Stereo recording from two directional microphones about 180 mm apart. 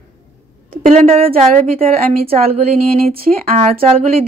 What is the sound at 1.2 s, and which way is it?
Speech, 55° right (ahead or behind).